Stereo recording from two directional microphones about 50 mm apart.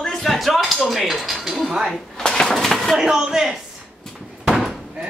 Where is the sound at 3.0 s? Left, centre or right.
Centre.